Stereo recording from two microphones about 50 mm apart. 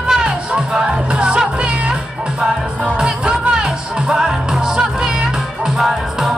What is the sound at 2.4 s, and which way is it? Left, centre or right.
Music, centre.